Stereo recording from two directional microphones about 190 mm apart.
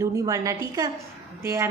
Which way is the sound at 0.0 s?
15° right (ahead or behind).